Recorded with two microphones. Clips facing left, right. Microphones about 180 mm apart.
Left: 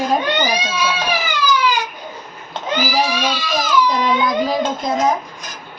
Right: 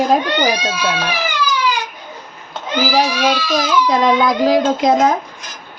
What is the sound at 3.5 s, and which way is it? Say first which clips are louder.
A child's voice: even; 90° right.